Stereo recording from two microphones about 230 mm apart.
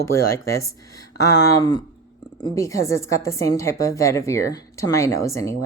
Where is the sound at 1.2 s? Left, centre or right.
Left.